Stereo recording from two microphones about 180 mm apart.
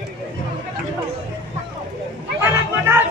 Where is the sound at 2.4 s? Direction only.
15° right (ahead or behind).